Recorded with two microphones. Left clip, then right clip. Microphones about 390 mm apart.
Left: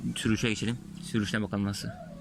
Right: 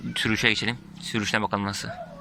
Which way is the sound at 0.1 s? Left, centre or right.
Centre.